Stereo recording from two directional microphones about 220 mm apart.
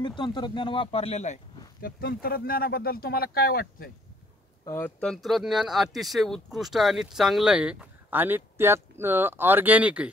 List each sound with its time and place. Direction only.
0.0 s speech: 20° left (ahead or behind)
1.8 s speech: 45° left (ahead or behind)
4.6 s speech: 10° left (ahead or behind); by 10.0 s 5° right (ahead or behind)